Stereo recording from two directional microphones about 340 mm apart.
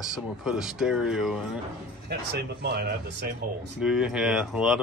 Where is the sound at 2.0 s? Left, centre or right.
Right.